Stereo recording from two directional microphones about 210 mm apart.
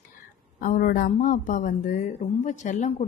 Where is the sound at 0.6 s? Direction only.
40° left (ahead or behind).